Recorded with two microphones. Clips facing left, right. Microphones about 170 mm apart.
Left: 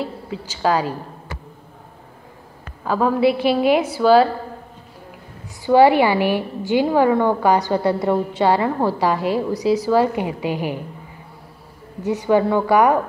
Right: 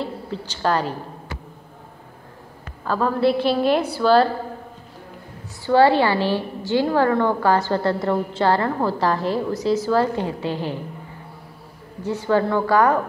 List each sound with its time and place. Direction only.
0.0 s a woman's voice: 5° left (ahead or behind)
2.8 s a woman's voice: 10° left (ahead or behind)
5.7 s a woman's voice: 15° left (ahead or behind)
12.0 s a woman's voice: 20° left (ahead or behind)